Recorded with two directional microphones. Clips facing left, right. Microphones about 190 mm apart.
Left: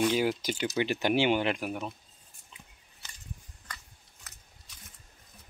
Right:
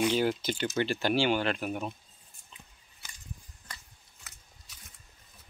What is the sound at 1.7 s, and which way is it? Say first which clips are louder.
Speech: right 1 dB; 5° right (ahead or behind).